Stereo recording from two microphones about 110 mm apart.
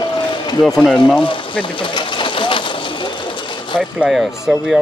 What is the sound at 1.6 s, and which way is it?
Sewing machine, 50° left (ahead or behind).